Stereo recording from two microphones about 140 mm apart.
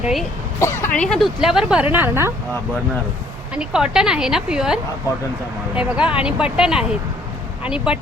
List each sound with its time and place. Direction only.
0.0 s speech: centre (ahead or behind)
0.6 s speech: 20° left (ahead or behind); by 2.3 s 15° right (ahead or behind)
3.5 s speech: 5° right (ahead or behind)